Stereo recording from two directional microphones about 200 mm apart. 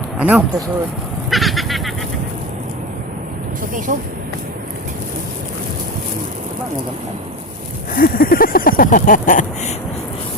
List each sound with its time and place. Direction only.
0.2 s speech: 5° right (ahead or behind)
1.3 s goat: centre (ahead or behind)
3.9 s speech: 40° right (ahead or behind)
7.9 s a sound: 45° left (ahead or behind)